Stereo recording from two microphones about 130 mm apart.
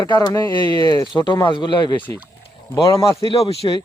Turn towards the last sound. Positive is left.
turn(degrees=40)  # may be behind; listen again after turning